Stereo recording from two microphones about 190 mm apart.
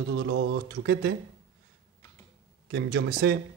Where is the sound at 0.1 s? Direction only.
80° right.